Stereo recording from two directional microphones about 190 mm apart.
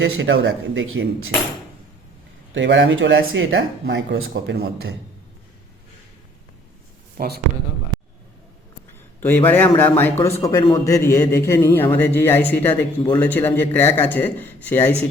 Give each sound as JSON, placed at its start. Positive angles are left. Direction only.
{"t": 0.0, "sound": "a man's voice", "side_deg": -75}
{"t": 2.6, "sound": "speech", "side_deg": -70}
{"t": 7.2, "sound": "speech", "side_deg": -55}
{"t": 9.2, "sound": "a man's voice", "side_deg": 10}